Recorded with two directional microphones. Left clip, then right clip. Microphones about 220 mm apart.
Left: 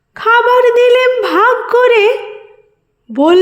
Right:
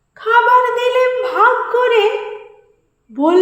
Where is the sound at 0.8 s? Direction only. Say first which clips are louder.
Left 6 dB; 50° left (ahead or behind).